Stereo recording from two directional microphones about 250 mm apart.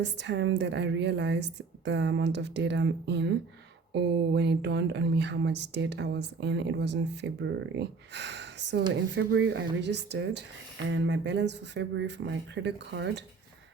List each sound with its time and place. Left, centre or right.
0.0 s speech: right